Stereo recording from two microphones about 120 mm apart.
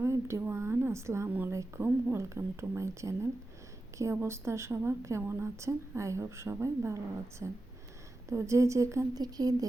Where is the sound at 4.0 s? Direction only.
20° right (ahead or behind).